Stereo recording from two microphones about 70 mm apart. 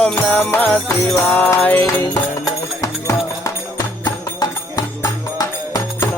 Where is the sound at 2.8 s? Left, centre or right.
Left.